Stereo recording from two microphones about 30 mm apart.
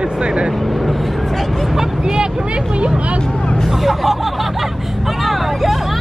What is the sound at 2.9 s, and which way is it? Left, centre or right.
Speech, right.